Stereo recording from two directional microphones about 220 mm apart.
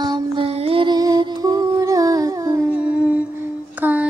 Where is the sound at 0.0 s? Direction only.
20° right (ahead or behind).